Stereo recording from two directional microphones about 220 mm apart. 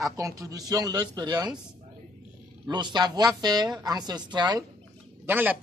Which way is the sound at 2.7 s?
20° right (ahead or behind).